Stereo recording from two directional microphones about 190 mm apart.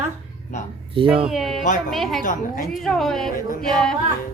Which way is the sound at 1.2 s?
Centre (ahead or behind).